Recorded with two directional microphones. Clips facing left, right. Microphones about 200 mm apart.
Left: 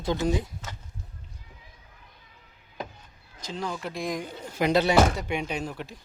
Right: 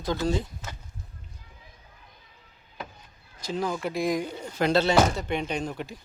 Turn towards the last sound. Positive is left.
turn(degrees=0)  # may be behind; listen again after turning